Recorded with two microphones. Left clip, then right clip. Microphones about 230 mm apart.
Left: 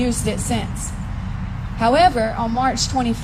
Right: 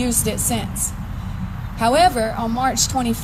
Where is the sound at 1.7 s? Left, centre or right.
Right.